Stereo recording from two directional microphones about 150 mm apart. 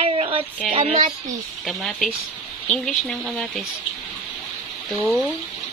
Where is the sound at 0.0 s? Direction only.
40° right (ahead or behind).